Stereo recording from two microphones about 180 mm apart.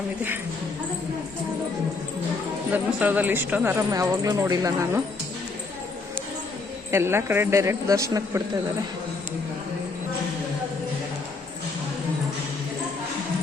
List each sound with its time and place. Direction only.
2.7 s a woman's voice: 10° right (ahead or behind)
6.9 s a woman's voice: 15° right (ahead or behind)